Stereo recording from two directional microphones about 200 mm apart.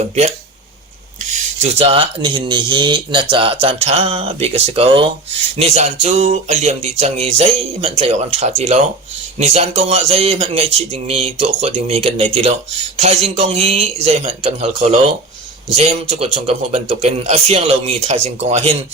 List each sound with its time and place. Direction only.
1.2 s speech: 35° right (ahead or behind)